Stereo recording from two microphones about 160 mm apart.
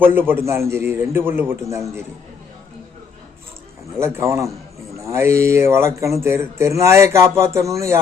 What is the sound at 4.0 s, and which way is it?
Speech, 15° right (ahead or behind).